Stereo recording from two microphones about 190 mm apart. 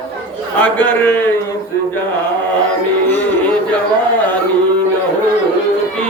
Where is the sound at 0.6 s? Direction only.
10° left (ahead or behind).